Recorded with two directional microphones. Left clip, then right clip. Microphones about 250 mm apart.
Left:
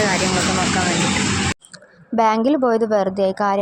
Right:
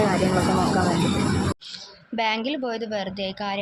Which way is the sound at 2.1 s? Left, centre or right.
Left.